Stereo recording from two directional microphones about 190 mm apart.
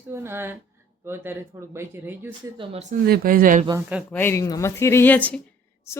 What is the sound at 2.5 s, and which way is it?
Speech, 35° right (ahead or behind).